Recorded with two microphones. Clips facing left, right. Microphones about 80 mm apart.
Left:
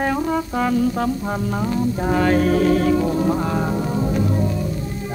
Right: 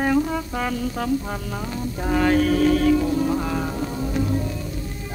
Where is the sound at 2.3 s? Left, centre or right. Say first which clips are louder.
Left 1 dB; left.